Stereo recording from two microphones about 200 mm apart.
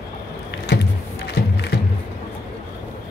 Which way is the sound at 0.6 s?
60° left (ahead or behind).